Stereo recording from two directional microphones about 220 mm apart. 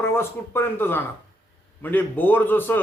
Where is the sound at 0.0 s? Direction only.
10° left (ahead or behind).